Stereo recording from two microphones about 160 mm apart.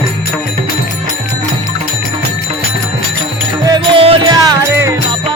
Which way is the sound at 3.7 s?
30° right (ahead or behind).